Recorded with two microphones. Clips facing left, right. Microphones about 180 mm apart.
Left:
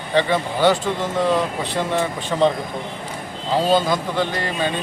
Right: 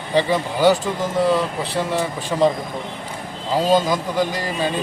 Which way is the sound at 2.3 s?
10° right (ahead or behind).